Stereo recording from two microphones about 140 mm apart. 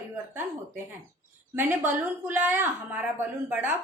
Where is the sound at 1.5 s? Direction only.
15° right (ahead or behind).